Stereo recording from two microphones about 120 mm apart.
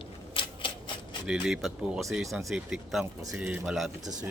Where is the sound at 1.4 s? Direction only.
5° right (ahead or behind).